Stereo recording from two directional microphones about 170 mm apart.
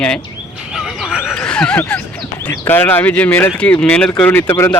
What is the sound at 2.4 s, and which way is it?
A man's voice, 10° left (ahead or behind).